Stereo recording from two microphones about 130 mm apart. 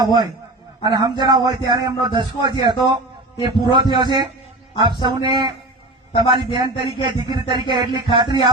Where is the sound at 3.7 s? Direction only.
35° right (ahead or behind).